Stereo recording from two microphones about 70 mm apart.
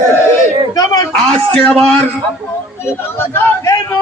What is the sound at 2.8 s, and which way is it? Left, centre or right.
Speech, left.